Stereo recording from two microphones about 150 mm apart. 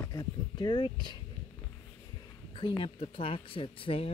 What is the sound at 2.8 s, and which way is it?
Speech, 35° left (ahead or behind).